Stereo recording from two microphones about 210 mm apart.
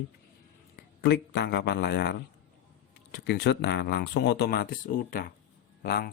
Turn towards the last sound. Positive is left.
turn(degrees=45)  # may be behind; listen again after turning